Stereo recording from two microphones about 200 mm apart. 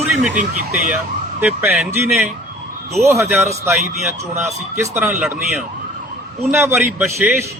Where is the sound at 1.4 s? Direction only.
10° right (ahead or behind).